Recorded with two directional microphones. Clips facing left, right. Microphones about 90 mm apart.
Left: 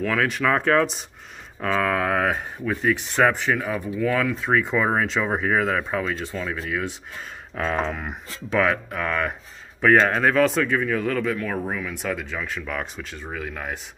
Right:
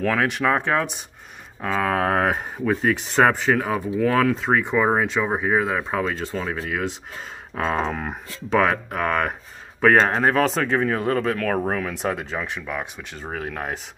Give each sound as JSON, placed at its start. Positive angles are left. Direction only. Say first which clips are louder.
{"t": 0.2, "sound": "speech", "louder": "right 1 dB", "side_deg": -20}
{"t": 1.9, "sound": "speech", "louder": "right 5 dB", "side_deg": -35}
{"t": 4.5, "sound": "speech", "louder": "right 2 dB", "side_deg": -20}
{"t": 5.9, "sound": "speech", "louder": "right 2 dB", "side_deg": -35}
{"t": 11.5, "sound": "speech", "louder": "right 4 dB", "side_deg": -45}
{"t": 12.0, "sound": "speech", "louder": "right 3 dB", "side_deg": -30}
{"t": 12.6, "sound": "speech", "louder": "even", "side_deg": -5}
{"t": 13.3, "sound": "speech", "louder": "right 3 dB", "side_deg": -40}